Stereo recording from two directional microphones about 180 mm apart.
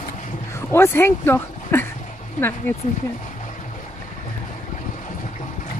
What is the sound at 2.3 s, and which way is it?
Speech, 15° left (ahead or behind).